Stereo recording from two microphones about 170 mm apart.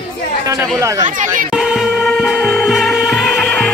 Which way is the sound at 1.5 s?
5° right (ahead or behind).